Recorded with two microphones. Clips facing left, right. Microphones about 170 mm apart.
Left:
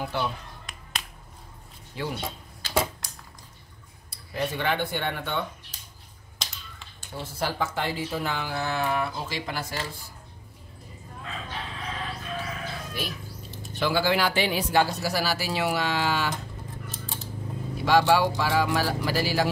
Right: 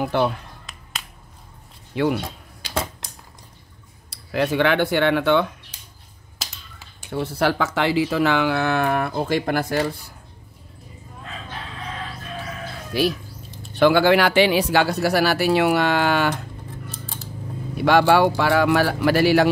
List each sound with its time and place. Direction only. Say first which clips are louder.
0.0 s speech: right 9 dB; 60° right (ahead or behind)
2.0 s speech: right 12 dB; 70° right (ahead or behind)
4.1 s speech: right 8 dB; 85° right
6.4 s finger snapping: right 2 dB; 5° right (ahead or behind)
7.0 s speech: right 9 dB; 65° right (ahead or behind)
12.9 s speech: right 15 dB; 80° right
13.7 s speech: right 9 dB; 65° right (ahead or behind)
17.7 s speech: right 5 dB; 65° right (ahead or behind)